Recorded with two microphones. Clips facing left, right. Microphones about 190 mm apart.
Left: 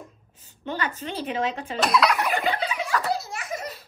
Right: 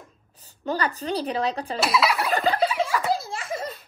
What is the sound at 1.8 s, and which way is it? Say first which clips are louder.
Fowl: left 2 dB; 5° right (ahead or behind).